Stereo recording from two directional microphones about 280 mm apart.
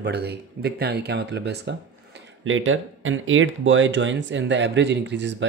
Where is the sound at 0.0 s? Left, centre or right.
Right.